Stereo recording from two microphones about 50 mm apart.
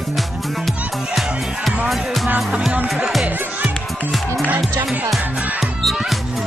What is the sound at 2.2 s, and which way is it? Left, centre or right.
Music, right.